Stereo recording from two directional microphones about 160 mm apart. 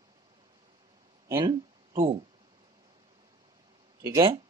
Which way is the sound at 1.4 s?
30° right (ahead or behind).